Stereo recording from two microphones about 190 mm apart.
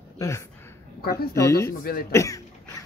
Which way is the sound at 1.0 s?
55° left (ahead or behind).